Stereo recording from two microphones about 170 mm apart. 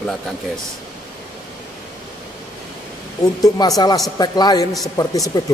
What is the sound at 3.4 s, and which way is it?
A man's voice, 20° left (ahead or behind).